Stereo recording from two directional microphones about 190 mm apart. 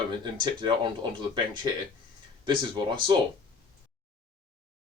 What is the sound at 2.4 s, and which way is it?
Speech, 25° right (ahead or behind).